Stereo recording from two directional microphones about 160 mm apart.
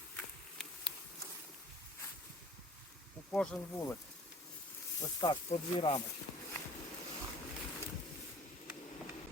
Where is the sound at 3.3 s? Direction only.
10° left (ahead or behind).